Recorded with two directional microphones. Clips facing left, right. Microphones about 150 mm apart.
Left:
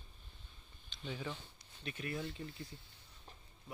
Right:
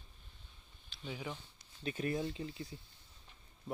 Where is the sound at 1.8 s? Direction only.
35° right (ahead or behind).